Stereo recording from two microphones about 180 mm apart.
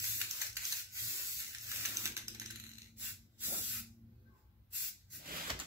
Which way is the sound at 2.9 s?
10° right (ahead or behind).